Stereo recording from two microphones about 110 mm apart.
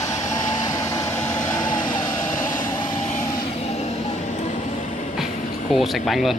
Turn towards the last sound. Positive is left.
turn(degrees=0)  # may be behind; listen again after turning